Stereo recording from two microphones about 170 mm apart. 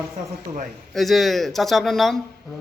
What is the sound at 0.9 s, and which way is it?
Speech, centre (ahead or behind).